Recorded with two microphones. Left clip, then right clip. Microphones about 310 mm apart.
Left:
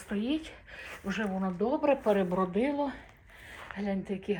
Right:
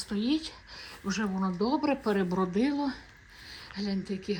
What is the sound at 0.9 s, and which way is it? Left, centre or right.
A woman's voice, centre.